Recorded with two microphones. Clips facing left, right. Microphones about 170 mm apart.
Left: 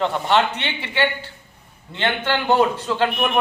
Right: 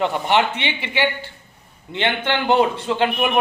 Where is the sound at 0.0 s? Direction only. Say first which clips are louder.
Even; 15° right (ahead or behind).